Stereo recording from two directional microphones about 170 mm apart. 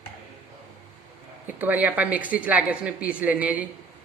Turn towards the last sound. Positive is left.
turn(degrees=-10)  # may be behind; listen again after turning